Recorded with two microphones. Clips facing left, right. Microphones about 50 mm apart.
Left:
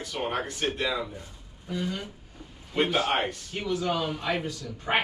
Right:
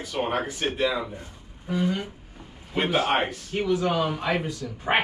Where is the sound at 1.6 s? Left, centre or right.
Centre.